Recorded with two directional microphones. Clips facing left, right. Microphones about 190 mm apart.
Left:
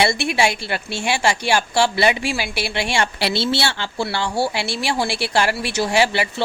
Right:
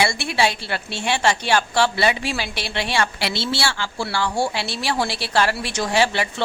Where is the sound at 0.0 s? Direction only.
20° left (ahead or behind).